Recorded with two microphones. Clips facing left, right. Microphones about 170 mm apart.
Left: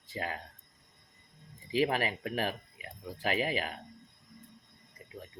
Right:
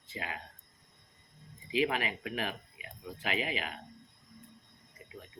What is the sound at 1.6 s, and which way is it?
Speech, 40° left (ahead or behind).